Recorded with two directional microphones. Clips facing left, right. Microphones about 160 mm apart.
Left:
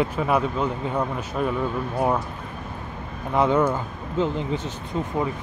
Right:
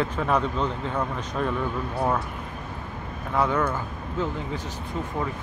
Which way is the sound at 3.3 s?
20° left (ahead or behind).